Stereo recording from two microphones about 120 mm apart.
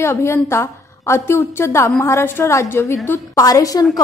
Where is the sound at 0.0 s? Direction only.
20° left (ahead or behind).